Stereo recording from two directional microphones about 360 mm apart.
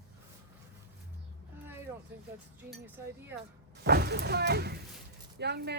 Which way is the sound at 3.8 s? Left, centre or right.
Right.